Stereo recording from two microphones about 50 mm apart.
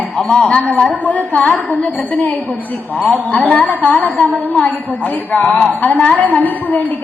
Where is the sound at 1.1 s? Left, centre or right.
Left.